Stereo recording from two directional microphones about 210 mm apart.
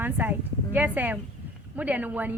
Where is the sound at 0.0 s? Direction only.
10° right (ahead or behind).